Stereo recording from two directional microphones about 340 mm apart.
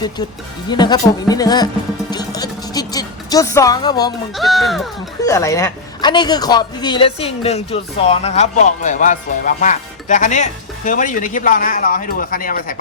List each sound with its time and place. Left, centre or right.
0.7 s speech: centre
4.4 s speech: centre; by 12.8 s left